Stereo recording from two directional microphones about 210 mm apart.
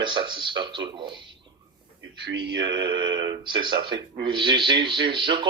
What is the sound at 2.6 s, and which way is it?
Speech, 20° right (ahead or behind).